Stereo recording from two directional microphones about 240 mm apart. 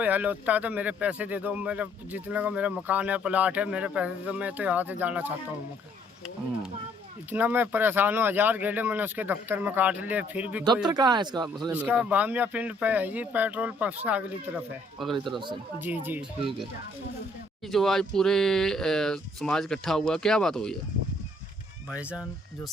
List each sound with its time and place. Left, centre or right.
0.0 s speech: centre
7.3 s speech: centre
10.8 s speech: centre
17.7 s speech: centre
21.8 s speech: centre